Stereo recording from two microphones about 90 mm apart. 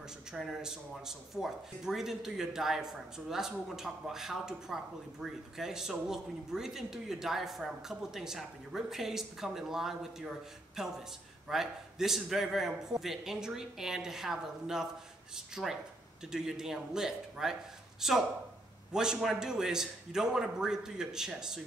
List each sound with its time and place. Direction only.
0.3 s a man's voice: 5° right (ahead or behind)